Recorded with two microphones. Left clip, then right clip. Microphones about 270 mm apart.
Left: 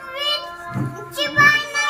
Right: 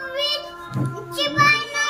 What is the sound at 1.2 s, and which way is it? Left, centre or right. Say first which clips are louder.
Music: left 3 dB; centre.